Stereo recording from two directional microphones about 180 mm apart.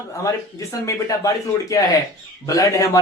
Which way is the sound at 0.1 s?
15° left (ahead or behind).